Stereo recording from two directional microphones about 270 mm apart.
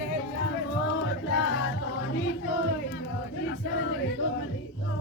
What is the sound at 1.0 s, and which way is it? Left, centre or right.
Music, left.